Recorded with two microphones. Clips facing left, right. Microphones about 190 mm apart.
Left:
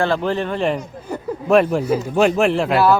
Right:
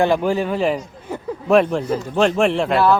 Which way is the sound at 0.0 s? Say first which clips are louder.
Right 2 dB; 10° right (ahead or behind).